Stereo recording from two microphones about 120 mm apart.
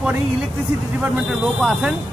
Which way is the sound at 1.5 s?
Centre (ahead or behind).